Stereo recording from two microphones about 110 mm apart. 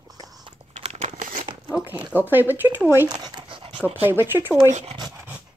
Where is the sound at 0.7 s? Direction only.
80° right.